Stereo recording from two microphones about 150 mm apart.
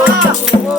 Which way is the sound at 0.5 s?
35° left (ahead or behind).